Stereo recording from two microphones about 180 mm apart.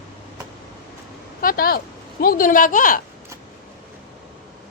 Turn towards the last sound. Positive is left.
turn(degrees=50)  # may be behind; listen again after turning